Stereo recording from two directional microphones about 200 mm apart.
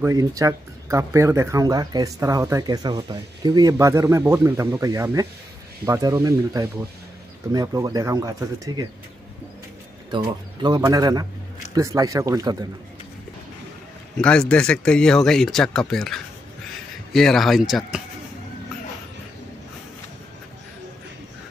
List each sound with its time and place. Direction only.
0.0 s speech: 15° right (ahead or behind)
10.1 s speech: 20° right (ahead or behind)
14.1 s speech: 5° left (ahead or behind)